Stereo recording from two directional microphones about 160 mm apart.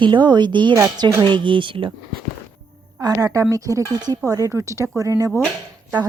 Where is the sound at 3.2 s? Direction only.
20° right (ahead or behind).